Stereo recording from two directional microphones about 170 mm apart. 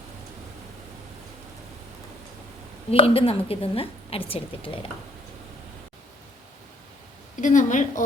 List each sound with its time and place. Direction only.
2.9 s a woman's voice: 35° left (ahead or behind)
7.4 s a woman's voice: 45° left (ahead or behind)